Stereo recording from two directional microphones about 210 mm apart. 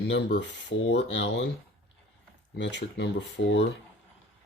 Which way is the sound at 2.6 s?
55° left (ahead or behind).